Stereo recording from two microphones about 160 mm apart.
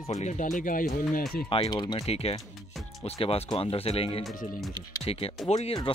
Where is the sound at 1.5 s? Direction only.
30° left (ahead or behind).